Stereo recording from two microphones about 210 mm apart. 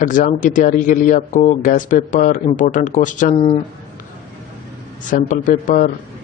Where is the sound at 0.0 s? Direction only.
40° left (ahead or behind).